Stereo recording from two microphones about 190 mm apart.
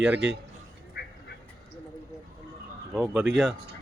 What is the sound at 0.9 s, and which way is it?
Duck, 60° left (ahead or behind).